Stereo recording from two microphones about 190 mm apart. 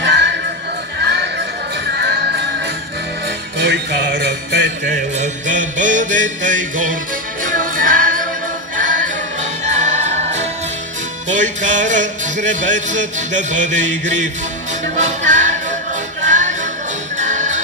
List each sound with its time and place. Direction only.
0.0 s music: 65° right (ahead or behind)
3.5 s music: 65° right (ahead or behind)
4.8 s mantra: 40° right (ahead or behind)
7.4 s music: 45° right (ahead or behind)